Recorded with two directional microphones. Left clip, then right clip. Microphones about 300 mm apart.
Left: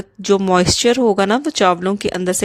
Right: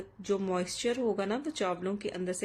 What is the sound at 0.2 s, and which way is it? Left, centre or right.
A woman's voice, left.